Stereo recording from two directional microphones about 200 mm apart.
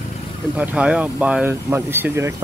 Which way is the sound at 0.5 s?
5° right (ahead or behind).